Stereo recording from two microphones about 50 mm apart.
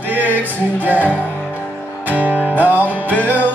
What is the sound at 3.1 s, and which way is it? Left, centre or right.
Music, left.